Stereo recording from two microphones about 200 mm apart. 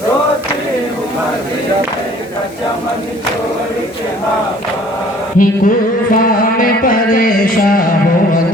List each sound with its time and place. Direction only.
5.4 s music: 45° left (ahead or behind)